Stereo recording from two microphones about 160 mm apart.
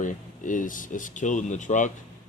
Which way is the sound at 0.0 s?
55° left (ahead or behind).